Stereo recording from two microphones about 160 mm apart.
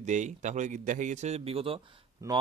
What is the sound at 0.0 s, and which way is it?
A man's voice, 50° right (ahead or behind).